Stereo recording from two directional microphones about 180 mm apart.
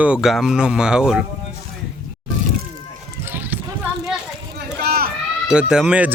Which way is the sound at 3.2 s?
10° right (ahead or behind).